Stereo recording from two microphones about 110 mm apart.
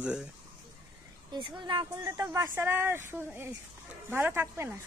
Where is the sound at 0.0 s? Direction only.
10° right (ahead or behind).